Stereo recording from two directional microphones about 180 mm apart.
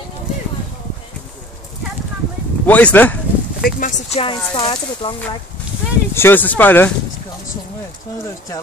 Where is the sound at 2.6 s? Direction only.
10° left (ahead or behind).